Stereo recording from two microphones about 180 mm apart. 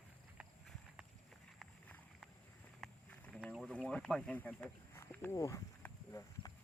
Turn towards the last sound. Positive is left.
turn(degrees=15)  # may be behind; listen again after turning